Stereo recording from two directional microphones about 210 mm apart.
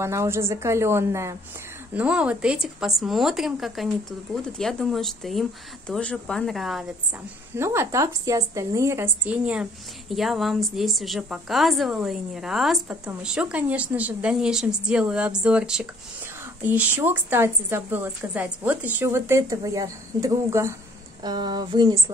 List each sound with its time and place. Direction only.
0.0 s a woman's voice: 15° right (ahead or behind)
7.5 s a woman's voice: 10° right (ahead or behind)